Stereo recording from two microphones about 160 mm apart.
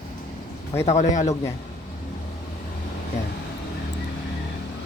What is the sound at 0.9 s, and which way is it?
Speech, 45° left (ahead or behind).